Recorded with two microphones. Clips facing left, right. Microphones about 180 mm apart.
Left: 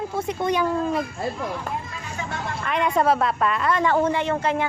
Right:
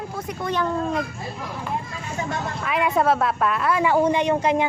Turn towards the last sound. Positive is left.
turn(degrees=-15)  # may be behind; listen again after turning